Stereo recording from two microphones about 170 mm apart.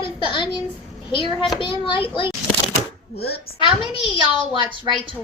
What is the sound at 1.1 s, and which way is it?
Speech, 30° left (ahead or behind).